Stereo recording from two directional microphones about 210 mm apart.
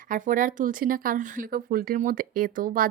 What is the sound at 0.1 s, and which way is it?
Speech, 40° right (ahead or behind).